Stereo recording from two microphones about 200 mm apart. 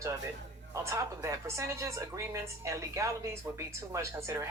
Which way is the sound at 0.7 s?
15° right (ahead or behind).